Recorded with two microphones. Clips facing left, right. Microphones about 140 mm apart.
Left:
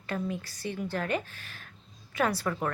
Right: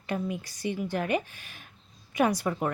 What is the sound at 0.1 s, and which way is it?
A woman's voice, 15° right (ahead or behind).